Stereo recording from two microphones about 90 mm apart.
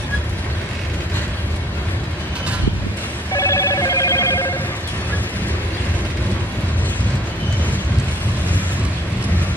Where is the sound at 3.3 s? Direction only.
35° left (ahead or behind).